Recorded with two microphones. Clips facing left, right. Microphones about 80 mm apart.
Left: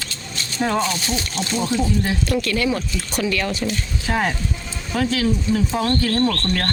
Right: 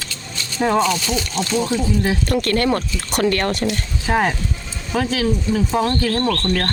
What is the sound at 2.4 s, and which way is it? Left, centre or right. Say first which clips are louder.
Speech: right 3 dB; right.